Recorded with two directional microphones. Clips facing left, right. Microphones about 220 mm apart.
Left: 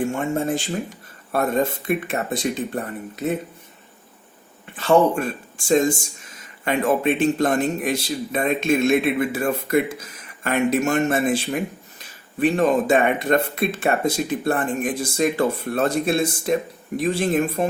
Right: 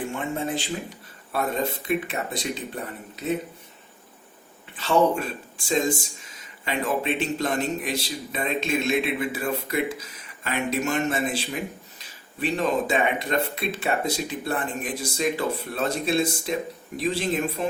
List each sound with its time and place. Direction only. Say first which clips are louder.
0.1 s a man's voice: left 5 dB; 45° left (ahead or behind)
4.8 s a man's voice: left 4 dB; 50° left (ahead or behind)